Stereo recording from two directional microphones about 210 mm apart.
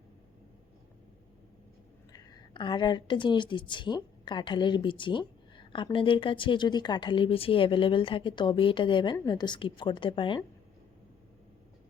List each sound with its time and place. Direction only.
2.1 s a woman's voice: 20° left (ahead or behind)